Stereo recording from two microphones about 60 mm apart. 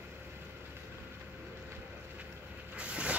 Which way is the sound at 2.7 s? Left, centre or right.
Centre.